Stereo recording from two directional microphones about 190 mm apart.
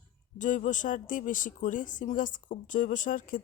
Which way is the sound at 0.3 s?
40° left (ahead or behind).